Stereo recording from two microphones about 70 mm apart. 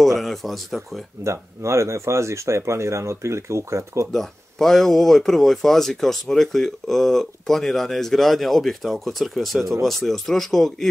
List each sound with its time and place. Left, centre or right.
0.0 s speech: centre
1.2 s speech: right
4.1 s speech: centre